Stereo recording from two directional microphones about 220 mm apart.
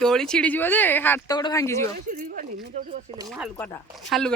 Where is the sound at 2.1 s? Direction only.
40° right (ahead or behind).